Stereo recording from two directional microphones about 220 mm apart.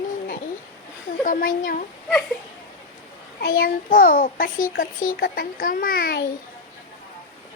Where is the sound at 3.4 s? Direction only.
45° left (ahead or behind).